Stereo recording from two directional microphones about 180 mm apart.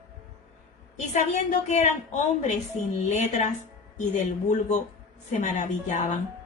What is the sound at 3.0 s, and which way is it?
Speech, 40° left (ahead or behind).